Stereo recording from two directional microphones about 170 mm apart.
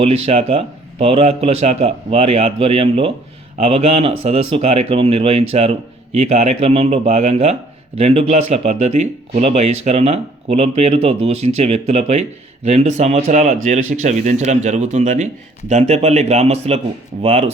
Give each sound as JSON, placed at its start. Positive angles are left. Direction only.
{"t": 0.0, "sound": "speech", "side_deg": -35}